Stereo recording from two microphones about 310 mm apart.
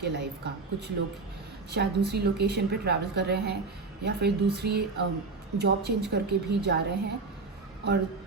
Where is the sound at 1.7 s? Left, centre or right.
Right.